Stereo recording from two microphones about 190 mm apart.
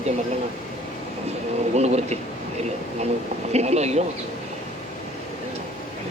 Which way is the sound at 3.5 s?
35° right (ahead or behind).